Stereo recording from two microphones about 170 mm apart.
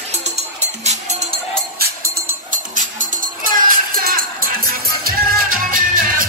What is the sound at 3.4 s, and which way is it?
Music, 55° right (ahead or behind).